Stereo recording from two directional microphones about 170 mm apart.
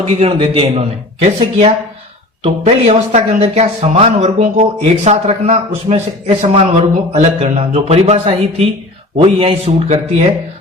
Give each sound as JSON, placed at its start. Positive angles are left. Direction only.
{"t": 0.1, "sound": "speech", "side_deg": -35}
{"t": 2.4, "sound": "speech", "side_deg": -35}